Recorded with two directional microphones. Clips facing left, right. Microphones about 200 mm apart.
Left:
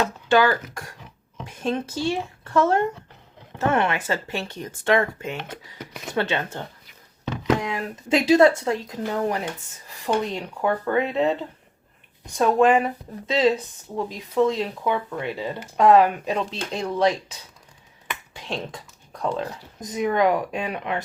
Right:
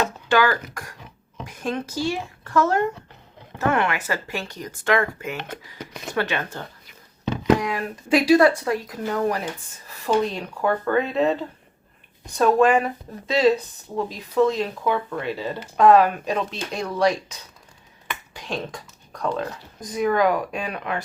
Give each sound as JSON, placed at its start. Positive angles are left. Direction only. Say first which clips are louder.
{"t": 0.3, "sound": "speech", "louder": "left 2 dB", "side_deg": 25}
{"t": 5.4, "sound": "speech", "louder": "right 1 dB", "side_deg": 5}
{"t": 6.1, "sound": "speech", "louder": "left 1 dB", "side_deg": 25}
{"t": 7.6, "sound": "speech", "louder": "right 2 dB", "side_deg": 25}
{"t": 12.4, "sound": "speech", "louder": "right 1 dB", "side_deg": 20}
{"t": 18.3, "sound": "finger snapping", "louder": "right 1 dB", "side_deg": 25}
{"t": 19.2, "sound": "speech", "louder": "even", "side_deg": 20}